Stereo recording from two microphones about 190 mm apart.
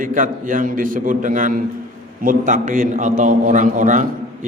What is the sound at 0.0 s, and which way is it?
A man's voice, 45° right (ahead or behind).